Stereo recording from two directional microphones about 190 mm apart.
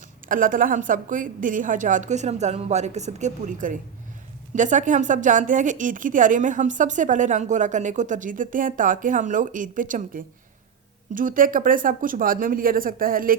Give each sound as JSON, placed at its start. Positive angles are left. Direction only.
{"t": 0.3, "sound": "a woman's voice", "side_deg": -45}